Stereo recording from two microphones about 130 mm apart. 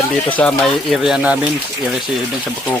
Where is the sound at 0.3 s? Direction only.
10° left (ahead or behind).